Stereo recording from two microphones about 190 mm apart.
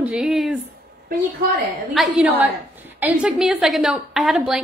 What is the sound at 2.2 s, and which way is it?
A woman's voice, 10° right (ahead or behind).